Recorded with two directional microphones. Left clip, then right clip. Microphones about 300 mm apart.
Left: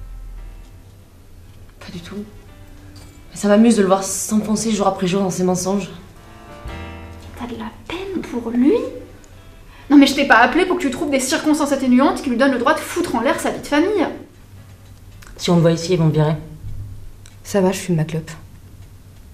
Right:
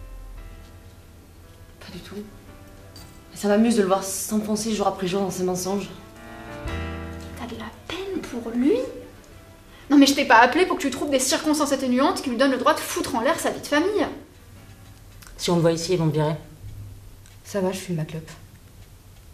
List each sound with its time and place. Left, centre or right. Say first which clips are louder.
1.8 s insect: left 5 dB; centre
3.3 s a woman's voice: left 6 dB; centre
7.5 s a sound: left 5 dB; right
9.8 s a woman's voice: left 5 dB; right
15.3 s a woman's voice: left 4 dB; centre
17.5 s speech: left 8 dB; centre